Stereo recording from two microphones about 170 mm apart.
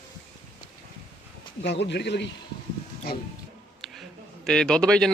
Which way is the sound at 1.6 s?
90° left.